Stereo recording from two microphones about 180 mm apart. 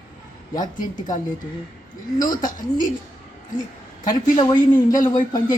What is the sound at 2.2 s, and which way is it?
Speech, 45° left (ahead or behind).